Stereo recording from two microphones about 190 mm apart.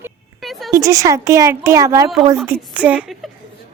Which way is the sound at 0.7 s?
15° right (ahead or behind).